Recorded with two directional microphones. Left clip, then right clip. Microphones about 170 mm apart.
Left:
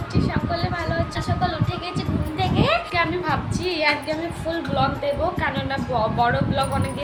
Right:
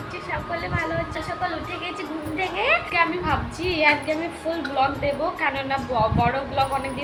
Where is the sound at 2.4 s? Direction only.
20° left (ahead or behind).